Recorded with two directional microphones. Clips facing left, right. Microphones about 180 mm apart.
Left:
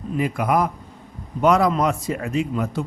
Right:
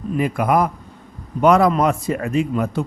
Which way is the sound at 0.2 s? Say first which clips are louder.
Right 3 dB; 55° right (ahead or behind).